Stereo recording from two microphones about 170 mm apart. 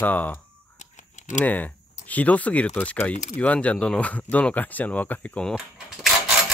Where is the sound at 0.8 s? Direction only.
45° left (ahead or behind).